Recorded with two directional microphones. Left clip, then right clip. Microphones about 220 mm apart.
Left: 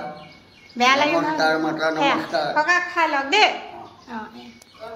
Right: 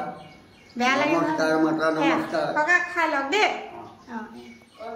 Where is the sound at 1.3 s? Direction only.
15° right (ahead or behind).